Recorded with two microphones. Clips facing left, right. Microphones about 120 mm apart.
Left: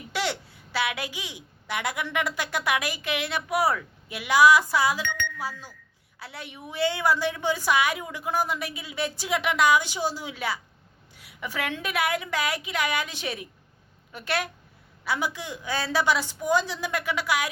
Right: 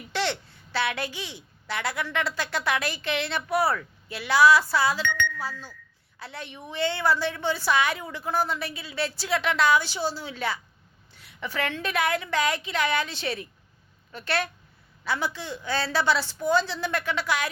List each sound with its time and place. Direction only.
0.1 s a woman's voice: 10° left (ahead or behind)